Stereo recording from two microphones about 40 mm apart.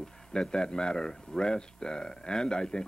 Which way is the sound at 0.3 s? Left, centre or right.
Left.